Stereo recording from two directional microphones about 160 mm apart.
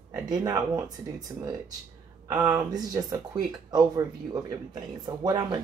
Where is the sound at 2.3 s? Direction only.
20° right (ahead or behind).